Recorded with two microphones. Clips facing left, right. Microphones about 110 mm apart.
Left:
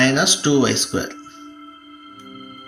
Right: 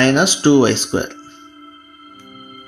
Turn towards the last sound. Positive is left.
turn(degrees=-45)  # may be behind; listen again after turning